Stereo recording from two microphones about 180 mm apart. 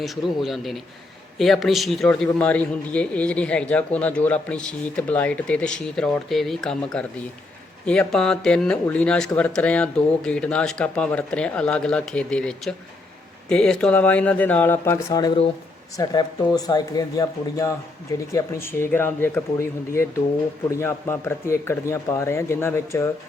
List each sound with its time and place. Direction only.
0.0 s a man's voice: centre (ahead or behind); by 23.0 s 15° left (ahead or behind)